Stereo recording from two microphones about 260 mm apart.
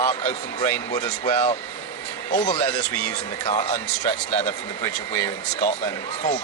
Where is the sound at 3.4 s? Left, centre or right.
Left.